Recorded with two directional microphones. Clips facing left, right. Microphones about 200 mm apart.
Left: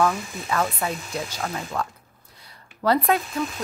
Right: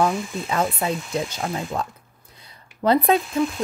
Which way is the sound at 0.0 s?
20° right (ahead or behind).